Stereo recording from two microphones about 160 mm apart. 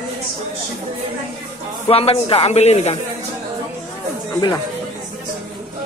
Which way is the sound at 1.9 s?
35° left (ahead or behind).